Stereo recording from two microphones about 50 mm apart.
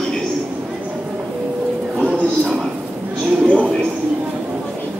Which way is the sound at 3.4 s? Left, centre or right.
Right.